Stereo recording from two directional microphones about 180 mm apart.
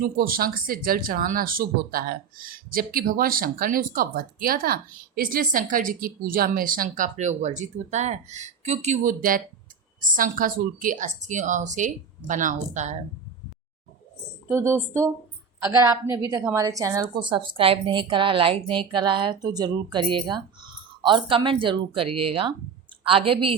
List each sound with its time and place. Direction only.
0.0 s speech: 55° right (ahead or behind)
14.4 s a woman's voice: 15° right (ahead or behind); by 23.6 s 30° right (ahead or behind)